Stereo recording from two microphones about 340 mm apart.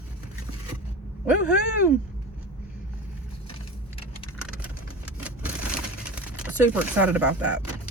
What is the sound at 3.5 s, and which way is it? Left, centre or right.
Keys jangling, centre.